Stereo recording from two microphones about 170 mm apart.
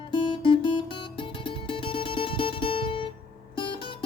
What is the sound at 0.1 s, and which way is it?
Music, 30° left (ahead or behind).